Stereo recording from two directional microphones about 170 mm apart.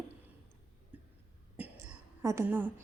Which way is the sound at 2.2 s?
15° right (ahead or behind).